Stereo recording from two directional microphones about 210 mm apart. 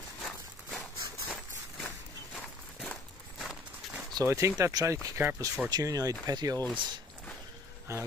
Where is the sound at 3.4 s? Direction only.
5° right (ahead or behind).